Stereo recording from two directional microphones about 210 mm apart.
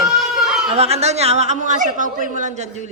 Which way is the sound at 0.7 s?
30° right (ahead or behind).